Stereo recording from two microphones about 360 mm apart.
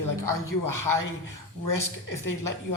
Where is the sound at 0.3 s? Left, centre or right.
Left.